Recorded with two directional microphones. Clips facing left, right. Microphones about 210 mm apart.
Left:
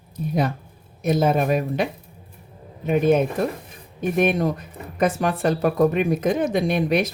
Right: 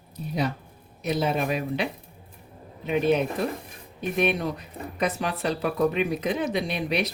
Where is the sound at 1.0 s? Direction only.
45° left (ahead or behind).